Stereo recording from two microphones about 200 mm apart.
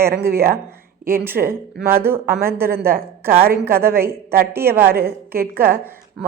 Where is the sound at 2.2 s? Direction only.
50° right (ahead or behind).